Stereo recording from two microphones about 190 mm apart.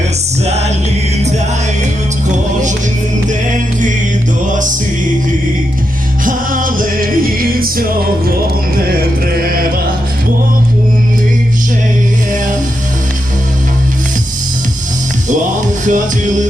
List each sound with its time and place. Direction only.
0.4 s music: 35° right (ahead or behind)
6.2 s music: 45° right (ahead or behind)
15.9 s music: 40° right (ahead or behind)